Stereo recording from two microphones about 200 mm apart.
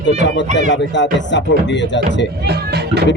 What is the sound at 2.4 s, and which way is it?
Speech, 55° right (ahead or behind).